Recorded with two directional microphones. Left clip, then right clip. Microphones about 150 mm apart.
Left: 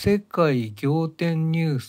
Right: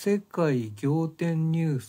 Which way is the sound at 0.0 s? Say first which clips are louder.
Left 5 dB; 20° left (ahead or behind).